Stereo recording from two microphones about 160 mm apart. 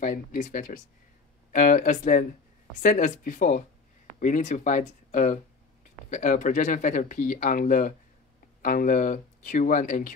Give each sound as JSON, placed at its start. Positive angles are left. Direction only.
{"t": 0.0, "sound": "speech", "side_deg": 55}